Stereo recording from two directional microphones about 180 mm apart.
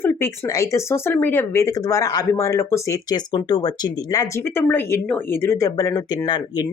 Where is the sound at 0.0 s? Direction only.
15° left (ahead or behind).